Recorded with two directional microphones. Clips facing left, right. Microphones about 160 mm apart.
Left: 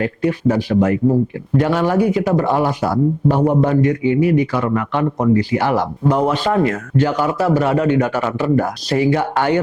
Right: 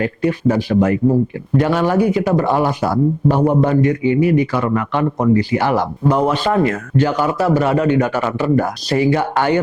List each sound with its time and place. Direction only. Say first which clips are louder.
0.0 s speech: right 1 dB; 15° right (ahead or behind)